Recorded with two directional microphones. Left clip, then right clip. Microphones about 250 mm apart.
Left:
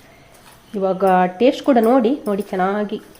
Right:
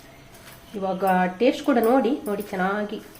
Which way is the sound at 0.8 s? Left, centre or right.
Left.